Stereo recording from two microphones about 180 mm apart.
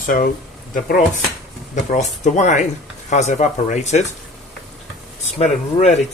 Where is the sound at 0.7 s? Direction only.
50° left (ahead or behind).